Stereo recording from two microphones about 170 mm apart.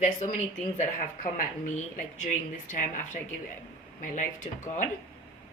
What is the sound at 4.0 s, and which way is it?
Speech, 50° left (ahead or behind).